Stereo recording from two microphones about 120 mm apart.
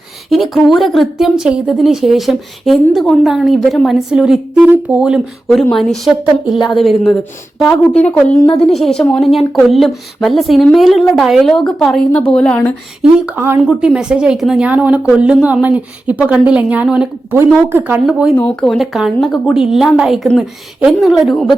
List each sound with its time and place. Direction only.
0.5 s a woman's voice: centre (ahead or behind)
7.6 s a woman's voice: 10° left (ahead or behind)
13.0 s a woman's voice: 5° right (ahead or behind)
17.3 s a woman's voice: 20° right (ahead or behind)
18.0 s a woman's voice: 5° right (ahead or behind)
18.3 s a woman's voice: 10° left (ahead or behind)